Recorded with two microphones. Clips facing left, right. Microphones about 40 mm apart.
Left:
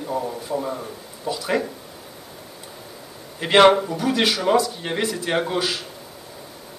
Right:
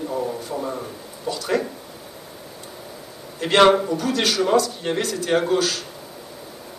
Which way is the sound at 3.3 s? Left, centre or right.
Centre.